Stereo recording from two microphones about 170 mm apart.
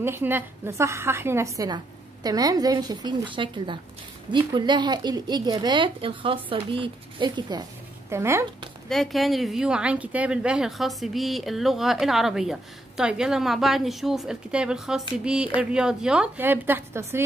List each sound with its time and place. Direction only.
0.0 s a woman's voice: 15° right (ahead or behind)
8.8 s a woman's voice: centre (ahead or behind); by 17.2 s 15° right (ahead or behind)